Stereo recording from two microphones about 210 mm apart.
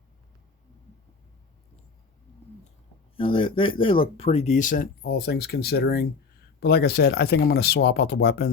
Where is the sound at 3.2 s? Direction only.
25° left (ahead or behind).